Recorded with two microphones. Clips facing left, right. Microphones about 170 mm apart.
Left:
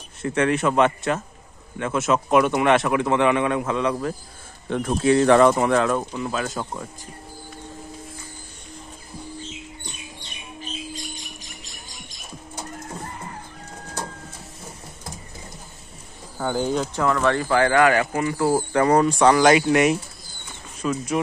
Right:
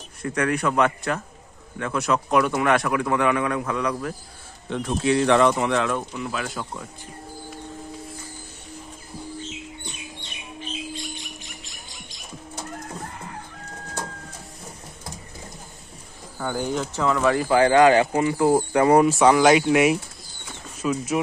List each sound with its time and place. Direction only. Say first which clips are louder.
0.2 s a man's voice: left 3 dB; 25° left (ahead or behind)
4.6 s speech: left 3 dB; 50° left (ahead or behind)
16.3 s a man's voice: left 3 dB; 20° left (ahead or behind)
16.9 s speech: right 2 dB; 10° right (ahead or behind)